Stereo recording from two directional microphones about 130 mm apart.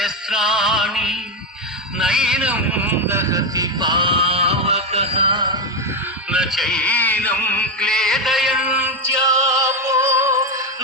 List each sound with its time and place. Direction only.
0.0 s music: 5° right (ahead or behind)
2.0 s speech: 5° right (ahead or behind); by 5.5 s 40° right (ahead or behind)
6.3 s music: 5° right (ahead or behind)
9.2 s music: 25° right (ahead or behind)